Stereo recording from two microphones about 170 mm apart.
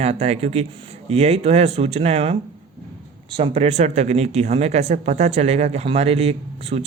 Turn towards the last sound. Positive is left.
turn(degrees=-40)  # may be behind; listen again after turning